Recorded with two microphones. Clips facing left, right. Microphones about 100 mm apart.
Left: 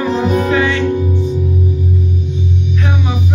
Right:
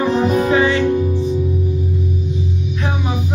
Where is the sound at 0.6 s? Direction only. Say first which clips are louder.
Even; 30° right (ahead or behind).